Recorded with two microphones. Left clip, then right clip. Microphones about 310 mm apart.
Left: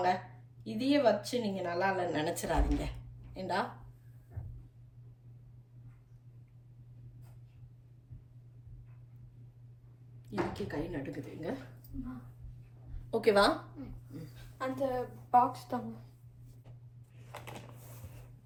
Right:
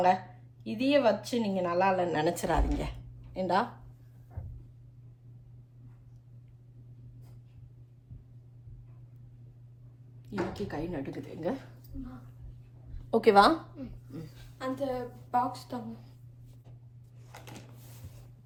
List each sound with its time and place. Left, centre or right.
0.6 s speech: centre
10.2 s speech: centre
13.1 s a woman's voice: centre
14.6 s a woman's voice: centre